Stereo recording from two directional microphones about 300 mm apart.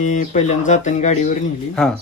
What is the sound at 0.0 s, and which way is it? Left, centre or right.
Speech, left.